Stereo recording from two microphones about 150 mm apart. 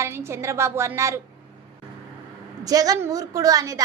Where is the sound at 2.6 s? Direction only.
25° right (ahead or behind).